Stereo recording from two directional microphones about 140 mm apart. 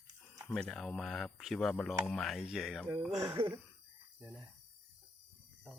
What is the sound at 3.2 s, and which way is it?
Speech, 35° right (ahead or behind).